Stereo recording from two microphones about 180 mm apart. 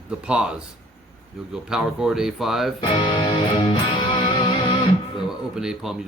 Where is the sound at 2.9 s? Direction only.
30° left (ahead or behind).